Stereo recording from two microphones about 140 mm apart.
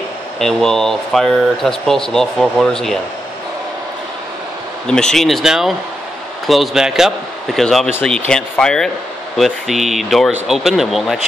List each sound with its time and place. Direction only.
0.4 s speech: 5° left (ahead or behind)
4.8 s speech: 5° left (ahead or behind)